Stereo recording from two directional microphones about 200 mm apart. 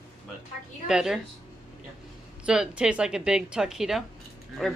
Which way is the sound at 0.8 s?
5° right (ahead or behind).